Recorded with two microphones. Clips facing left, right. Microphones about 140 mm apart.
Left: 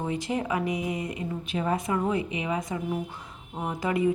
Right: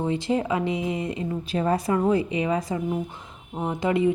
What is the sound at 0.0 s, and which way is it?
A woman's voice, 25° right (ahead or behind).